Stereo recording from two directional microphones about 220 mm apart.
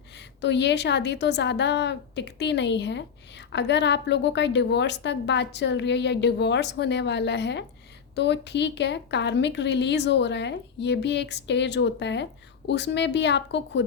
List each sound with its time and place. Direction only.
0.2 s a woman's voice: 50° left (ahead or behind)